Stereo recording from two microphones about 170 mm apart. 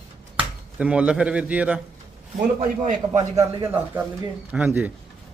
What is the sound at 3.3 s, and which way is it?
A man's voice, 20° right (ahead or behind).